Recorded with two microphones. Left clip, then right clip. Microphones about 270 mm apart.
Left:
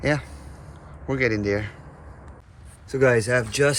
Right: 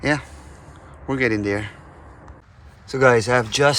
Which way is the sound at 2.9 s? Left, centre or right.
Centre.